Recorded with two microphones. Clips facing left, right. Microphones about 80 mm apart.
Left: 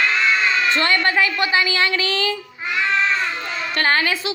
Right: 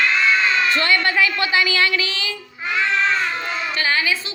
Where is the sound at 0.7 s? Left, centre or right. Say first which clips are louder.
Even; left.